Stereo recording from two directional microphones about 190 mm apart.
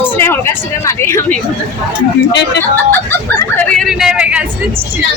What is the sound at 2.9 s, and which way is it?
Speech, 10° left (ahead or behind).